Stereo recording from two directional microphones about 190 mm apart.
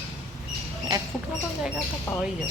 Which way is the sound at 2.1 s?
10° left (ahead or behind).